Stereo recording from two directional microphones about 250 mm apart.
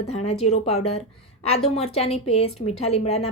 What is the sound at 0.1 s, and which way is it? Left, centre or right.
A woman's voice, left.